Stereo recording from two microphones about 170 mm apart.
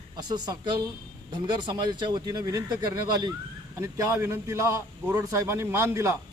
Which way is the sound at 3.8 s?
20° right (ahead or behind).